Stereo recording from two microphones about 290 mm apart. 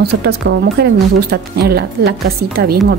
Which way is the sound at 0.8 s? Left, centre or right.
Right.